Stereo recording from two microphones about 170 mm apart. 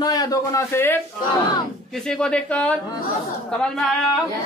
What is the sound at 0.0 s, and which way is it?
Speech, 20° left (ahead or behind).